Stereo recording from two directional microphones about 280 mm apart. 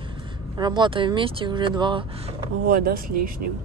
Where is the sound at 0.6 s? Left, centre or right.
Centre.